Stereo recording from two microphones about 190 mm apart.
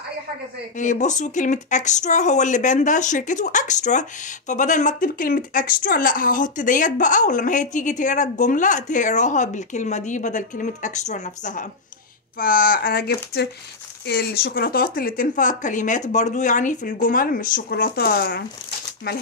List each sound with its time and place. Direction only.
0.7 s speech: 40° left (ahead or behind)